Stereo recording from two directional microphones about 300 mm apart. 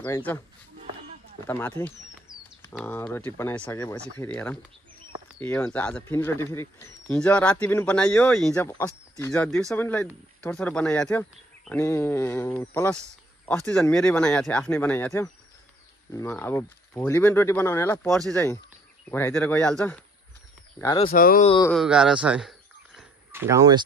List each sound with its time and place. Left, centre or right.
0.0 s speech: centre
1.4 s speech: centre
2.3 s bird: centre
2.7 s speech: centre
20.8 s speech: centre
21.1 s speech: left
21.5 s speech: centre
21.7 s a sound: centre